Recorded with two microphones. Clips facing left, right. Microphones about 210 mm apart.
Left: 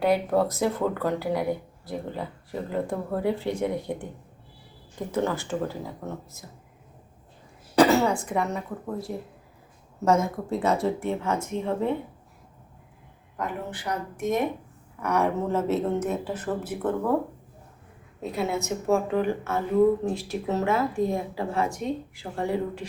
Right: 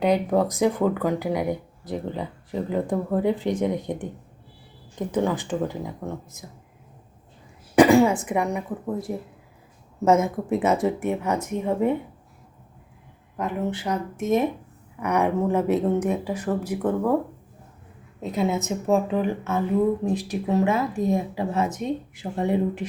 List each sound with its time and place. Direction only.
0.0 s speech: 15° right (ahead or behind)
7.8 s a woman's voice: 15° right (ahead or behind)
13.3 s speech: 25° right (ahead or behind)
18.2 s speech: 20° right (ahead or behind)